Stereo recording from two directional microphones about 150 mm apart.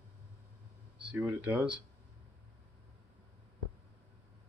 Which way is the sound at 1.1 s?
10° right (ahead or behind).